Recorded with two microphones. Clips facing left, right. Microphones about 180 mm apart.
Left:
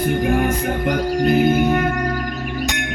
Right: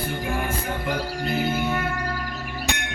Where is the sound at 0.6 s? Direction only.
50° left (ahead or behind).